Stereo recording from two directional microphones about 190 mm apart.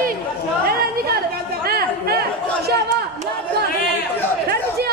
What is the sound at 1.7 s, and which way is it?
Chatter, 55° right (ahead or behind).